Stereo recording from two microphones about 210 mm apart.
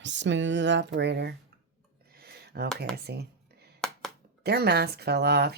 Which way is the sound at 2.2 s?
50° right (ahead or behind).